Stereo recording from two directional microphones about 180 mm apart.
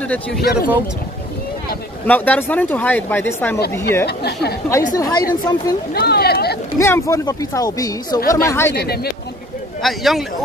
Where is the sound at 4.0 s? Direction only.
65° left (ahead or behind).